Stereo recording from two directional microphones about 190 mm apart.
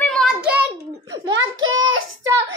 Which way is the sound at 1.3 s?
90° right.